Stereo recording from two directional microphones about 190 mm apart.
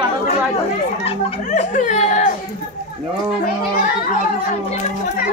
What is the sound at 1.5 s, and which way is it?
Speech, 40° left (ahead or behind).